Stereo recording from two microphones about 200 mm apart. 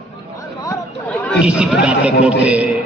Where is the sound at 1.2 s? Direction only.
5° right (ahead or behind).